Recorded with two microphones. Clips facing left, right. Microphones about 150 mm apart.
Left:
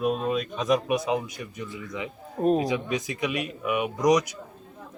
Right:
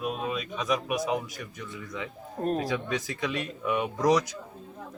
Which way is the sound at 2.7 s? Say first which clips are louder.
Left 3 dB; 20° left (ahead or behind).